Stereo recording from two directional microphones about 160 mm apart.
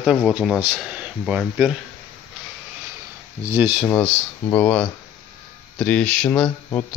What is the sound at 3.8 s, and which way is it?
Speech, 5° left (ahead or behind).